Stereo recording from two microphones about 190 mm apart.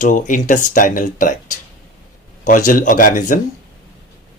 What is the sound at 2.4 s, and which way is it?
Speech, 45° left (ahead or behind).